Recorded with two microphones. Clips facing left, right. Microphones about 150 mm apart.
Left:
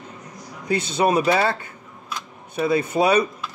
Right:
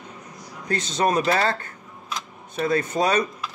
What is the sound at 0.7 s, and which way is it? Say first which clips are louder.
Speech: left 3 dB; 10° left (ahead or behind).